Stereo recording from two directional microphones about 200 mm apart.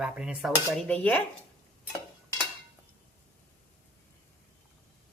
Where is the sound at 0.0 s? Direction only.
5° right (ahead or behind).